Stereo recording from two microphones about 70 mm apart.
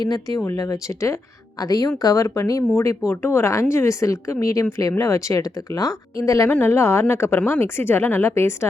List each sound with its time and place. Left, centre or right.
0.0 s speech: left
1.5 s speech: left
2.2 s speech: left
3.1 s speech: left
6.5 s speech: left